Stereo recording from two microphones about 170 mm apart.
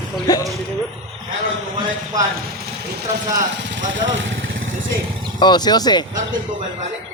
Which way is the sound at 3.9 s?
90° right.